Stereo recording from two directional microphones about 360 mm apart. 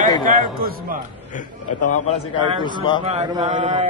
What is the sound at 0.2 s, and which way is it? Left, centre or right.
Speech, right.